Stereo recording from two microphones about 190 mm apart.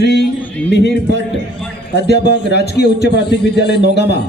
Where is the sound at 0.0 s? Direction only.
60° left (ahead or behind).